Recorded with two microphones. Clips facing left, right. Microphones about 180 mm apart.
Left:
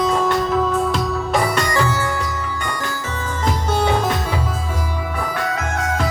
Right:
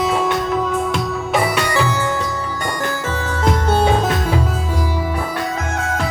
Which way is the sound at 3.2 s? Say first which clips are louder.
Right 3 dB; 60° right (ahead or behind).